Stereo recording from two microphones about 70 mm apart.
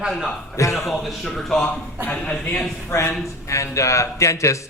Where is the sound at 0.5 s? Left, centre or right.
Left.